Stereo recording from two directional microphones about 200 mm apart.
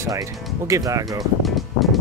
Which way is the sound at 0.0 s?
15° right (ahead or behind).